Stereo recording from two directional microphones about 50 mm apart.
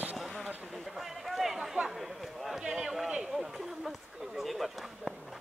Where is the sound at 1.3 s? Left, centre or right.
Centre.